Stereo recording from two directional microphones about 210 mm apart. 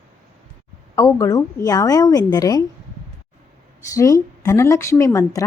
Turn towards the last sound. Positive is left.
turn(degrees=15)  # may be behind; listen again after turning